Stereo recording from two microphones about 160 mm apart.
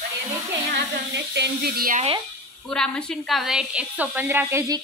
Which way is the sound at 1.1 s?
90° right.